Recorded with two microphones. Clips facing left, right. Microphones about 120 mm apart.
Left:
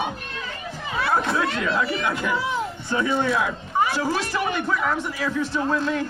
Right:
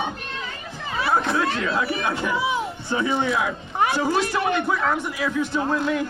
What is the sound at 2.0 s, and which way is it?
Speech, 25° right (ahead or behind).